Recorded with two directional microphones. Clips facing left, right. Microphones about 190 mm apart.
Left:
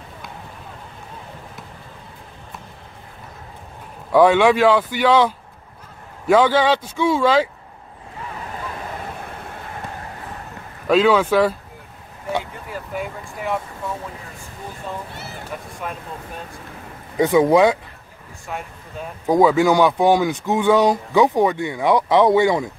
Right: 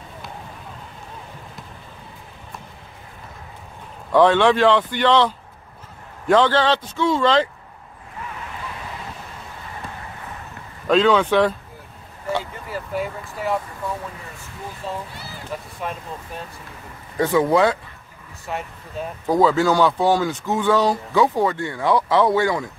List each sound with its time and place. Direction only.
4.1 s speech: 10° left (ahead or behind)
10.9 s speech: 5° left (ahead or behind)
12.7 s speech: centre (ahead or behind)
15.5 s speech: 5° left (ahead or behind)
17.2 s speech: 15° left (ahead or behind)
18.5 s speech: centre (ahead or behind)
19.2 s speech: 15° left (ahead or behind)